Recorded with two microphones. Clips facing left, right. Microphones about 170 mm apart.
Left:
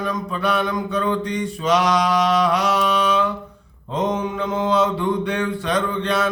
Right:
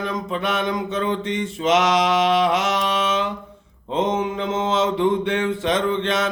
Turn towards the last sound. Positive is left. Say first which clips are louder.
# even
turn(degrees=-25)  # may be behind; listen again after turning